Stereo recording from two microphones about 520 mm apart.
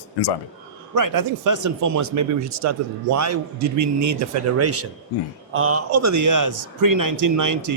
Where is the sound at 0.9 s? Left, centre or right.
Right.